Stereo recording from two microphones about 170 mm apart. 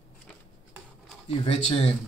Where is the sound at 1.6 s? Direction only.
40° left (ahead or behind).